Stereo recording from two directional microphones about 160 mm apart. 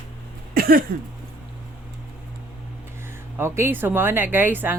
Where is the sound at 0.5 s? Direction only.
65° right (ahead or behind).